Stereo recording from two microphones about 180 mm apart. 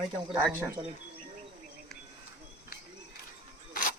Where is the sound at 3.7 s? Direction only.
50° left (ahead or behind).